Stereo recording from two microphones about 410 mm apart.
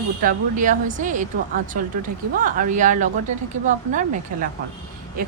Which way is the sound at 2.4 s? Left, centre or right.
Centre.